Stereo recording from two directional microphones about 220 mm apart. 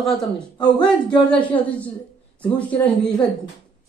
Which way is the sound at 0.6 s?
20° left (ahead or behind).